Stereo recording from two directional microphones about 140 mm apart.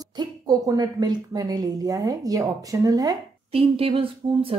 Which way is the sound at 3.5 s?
45° right (ahead or behind).